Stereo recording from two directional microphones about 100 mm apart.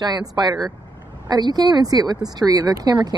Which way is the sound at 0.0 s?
45° right (ahead or behind).